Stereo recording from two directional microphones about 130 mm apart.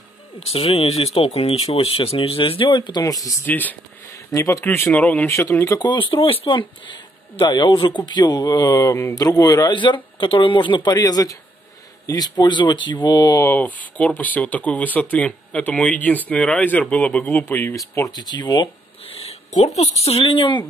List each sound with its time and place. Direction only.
0.5 s speech: 45° left (ahead or behind); by 3.3 s 30° left (ahead or behind)
3.4 s speech: 15° left (ahead or behind)
4.1 s speech: 25° left (ahead or behind)
5.3 s speech: 20° left (ahead or behind)
5.9 s speech: 40° left (ahead or behind)
19.0 s speech: 50° left (ahead or behind)